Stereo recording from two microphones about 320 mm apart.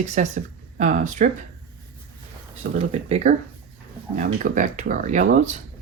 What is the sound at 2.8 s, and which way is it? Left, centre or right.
Speech, centre.